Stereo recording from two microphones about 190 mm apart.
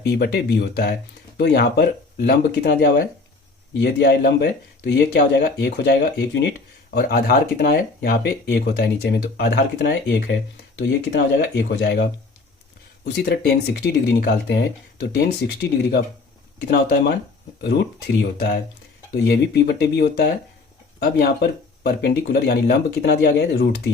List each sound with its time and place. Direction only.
0.0 s speech: 60° left (ahead or behind)
6.9 s speech: 50° left (ahead or behind)
13.1 s speech: 55° left (ahead or behind)
21.8 s speech: 55° left (ahead or behind)